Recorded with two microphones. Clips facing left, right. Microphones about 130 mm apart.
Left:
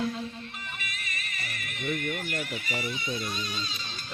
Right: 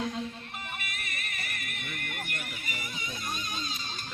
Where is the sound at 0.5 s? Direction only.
55° right (ahead or behind).